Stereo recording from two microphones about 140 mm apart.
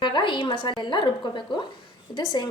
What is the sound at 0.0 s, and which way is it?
A woman's voice, 35° left (ahead or behind).